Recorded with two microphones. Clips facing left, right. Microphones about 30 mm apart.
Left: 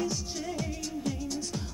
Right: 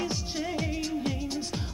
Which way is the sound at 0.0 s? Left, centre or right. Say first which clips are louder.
Right 1 dB; right.